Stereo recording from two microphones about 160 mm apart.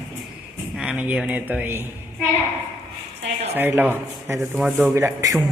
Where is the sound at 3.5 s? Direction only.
10° right (ahead or behind).